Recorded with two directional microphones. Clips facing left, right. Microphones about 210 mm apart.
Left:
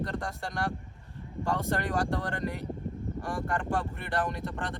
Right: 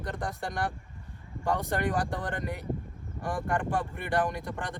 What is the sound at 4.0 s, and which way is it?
Speech, 15° right (ahead or behind).